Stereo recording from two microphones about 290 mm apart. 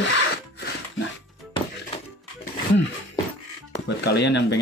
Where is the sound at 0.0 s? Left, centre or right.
Left.